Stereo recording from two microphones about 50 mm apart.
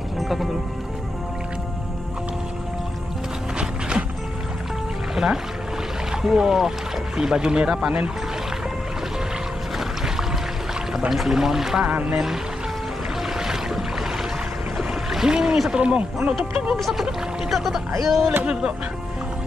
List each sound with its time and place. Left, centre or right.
0.2 s music: centre
5.1 s music: centre
6.2 s speech: centre
9.8 s music: centre
11.1 s speech: centre
11.9 s speech: right
13.4 s boat: centre
14.8 s a sound: centre
15.7 s speech: centre
16.7 s speech: centre
18.4 s speech: right